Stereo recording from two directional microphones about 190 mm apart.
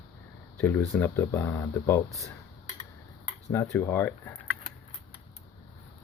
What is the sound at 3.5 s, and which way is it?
Speech, 15° left (ahead or behind).